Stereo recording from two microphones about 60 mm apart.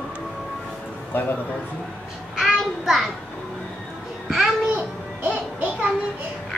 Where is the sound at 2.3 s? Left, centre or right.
Centre.